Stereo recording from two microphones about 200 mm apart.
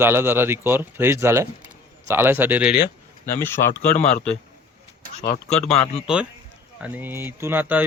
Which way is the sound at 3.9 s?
35° left (ahead or behind).